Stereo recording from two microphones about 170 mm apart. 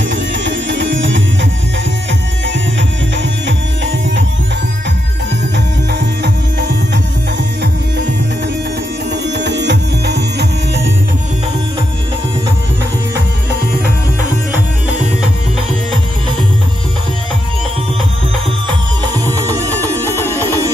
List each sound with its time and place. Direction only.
0.0 s music: 90° right
3.2 s music: 90° right
9.1 s music: 90° right